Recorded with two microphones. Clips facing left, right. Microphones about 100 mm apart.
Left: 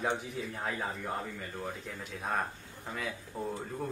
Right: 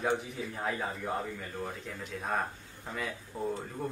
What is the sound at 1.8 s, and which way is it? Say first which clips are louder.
Speech: right 1 dB; centre (ahead or behind).